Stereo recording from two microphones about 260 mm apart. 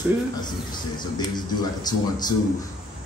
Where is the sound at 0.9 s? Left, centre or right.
Centre.